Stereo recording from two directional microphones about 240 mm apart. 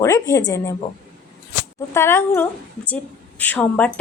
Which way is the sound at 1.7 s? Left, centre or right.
Centre.